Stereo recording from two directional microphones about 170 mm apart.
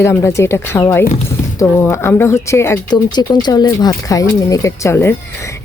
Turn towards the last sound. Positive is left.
turn(degrees=15)  # may be behind; listen again after turning